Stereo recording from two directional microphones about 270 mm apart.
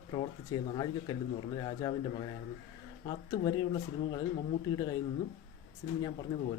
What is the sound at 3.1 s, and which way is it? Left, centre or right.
Speech, centre.